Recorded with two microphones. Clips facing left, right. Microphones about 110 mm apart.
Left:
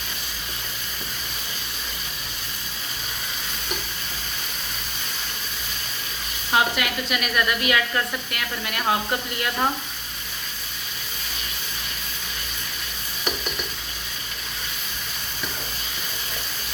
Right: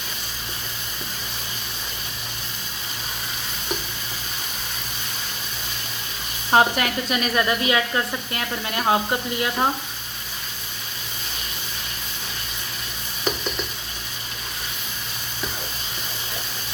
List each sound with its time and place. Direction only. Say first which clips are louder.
6.5 s speech: right 4 dB; 35° right (ahead or behind); by 9.6 s 20° right (ahead or behind)